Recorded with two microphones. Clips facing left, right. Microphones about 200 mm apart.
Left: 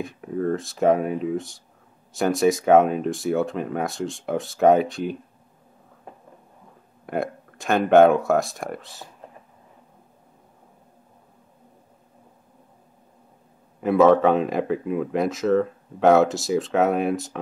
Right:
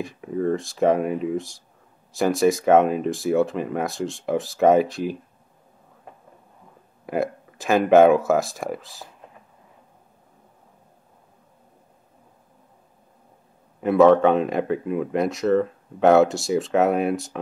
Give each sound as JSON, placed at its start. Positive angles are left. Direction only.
{"t": 0.0, "sound": "speech", "side_deg": 0}
{"t": 7.1, "sound": "speech", "side_deg": 0}
{"t": 13.7, "sound": "speech", "side_deg": 0}